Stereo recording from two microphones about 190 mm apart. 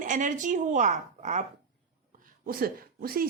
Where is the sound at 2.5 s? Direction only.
50° right (ahead or behind).